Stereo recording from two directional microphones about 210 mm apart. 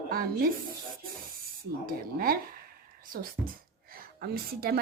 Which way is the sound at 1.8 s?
45° right (ahead or behind).